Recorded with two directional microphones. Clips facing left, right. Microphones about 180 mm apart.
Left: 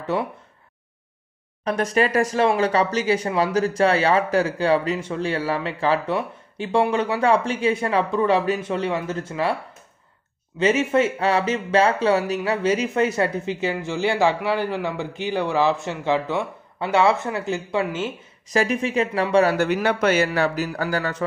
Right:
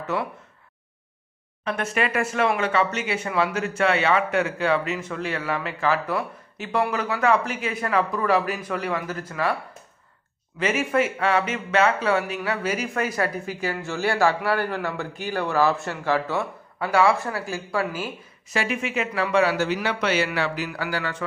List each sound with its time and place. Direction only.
0.0 s speech: 30° left (ahead or behind)
1.6 s speech: 40° left (ahead or behind)
10.6 s speech: 25° left (ahead or behind)
18.5 s speech: 40° left (ahead or behind)
19.5 s speech: 55° left (ahead or behind)